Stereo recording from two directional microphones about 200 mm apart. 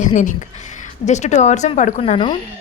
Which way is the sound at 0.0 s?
40° left (ahead or behind).